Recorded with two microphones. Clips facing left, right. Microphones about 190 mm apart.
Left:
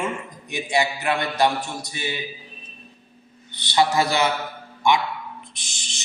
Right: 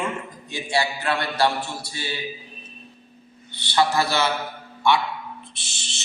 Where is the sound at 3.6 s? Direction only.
15° left (ahead or behind).